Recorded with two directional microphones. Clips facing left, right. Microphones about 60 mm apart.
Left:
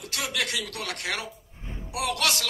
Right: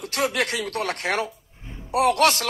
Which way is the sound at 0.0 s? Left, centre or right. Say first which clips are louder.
Right 7 dB; right.